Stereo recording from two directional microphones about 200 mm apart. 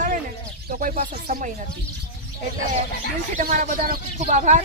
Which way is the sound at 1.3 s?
45° right (ahead or behind).